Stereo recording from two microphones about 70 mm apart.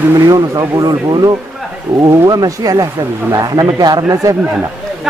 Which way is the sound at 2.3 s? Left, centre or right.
Right.